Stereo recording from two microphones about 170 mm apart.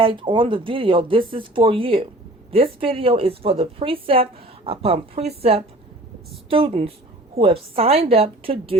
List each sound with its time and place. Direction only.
0.0 s a woman's voice: 30° right (ahead or behind)